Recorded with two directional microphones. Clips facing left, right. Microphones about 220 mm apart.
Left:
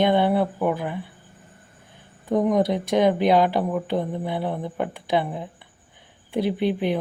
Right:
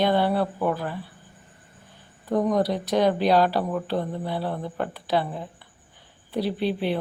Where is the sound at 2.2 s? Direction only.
20° left (ahead or behind).